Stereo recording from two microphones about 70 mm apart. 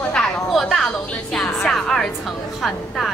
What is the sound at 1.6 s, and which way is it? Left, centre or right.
A woman's voice, centre.